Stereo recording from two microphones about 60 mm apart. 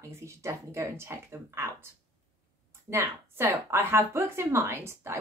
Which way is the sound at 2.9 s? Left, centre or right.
Right.